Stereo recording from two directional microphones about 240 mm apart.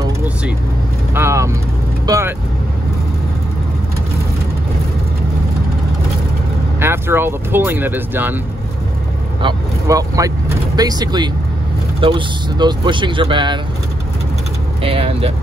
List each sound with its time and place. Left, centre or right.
1.1 s vehicle: centre
2.0 s speech: centre
6.8 s speech: centre
9.4 s speech: centre
14.8 s speech: right